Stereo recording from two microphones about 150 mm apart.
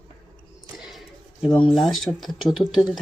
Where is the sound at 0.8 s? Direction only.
Centre (ahead or behind).